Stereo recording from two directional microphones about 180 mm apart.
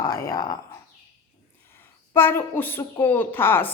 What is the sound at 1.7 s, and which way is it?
Speech, 10° left (ahead or behind).